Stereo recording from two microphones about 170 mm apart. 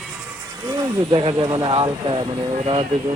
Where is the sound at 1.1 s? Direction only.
30° right (ahead or behind).